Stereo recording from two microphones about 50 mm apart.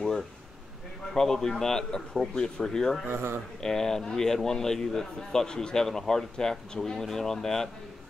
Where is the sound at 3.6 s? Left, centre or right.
Centre.